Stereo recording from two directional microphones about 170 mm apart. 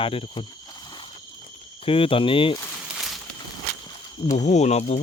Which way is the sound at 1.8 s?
30° left (ahead or behind).